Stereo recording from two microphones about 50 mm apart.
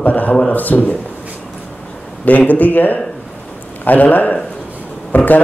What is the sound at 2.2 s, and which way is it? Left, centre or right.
A man's voice, left.